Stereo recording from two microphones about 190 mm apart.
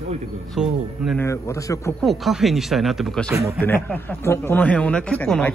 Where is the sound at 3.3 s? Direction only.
15° right (ahead or behind).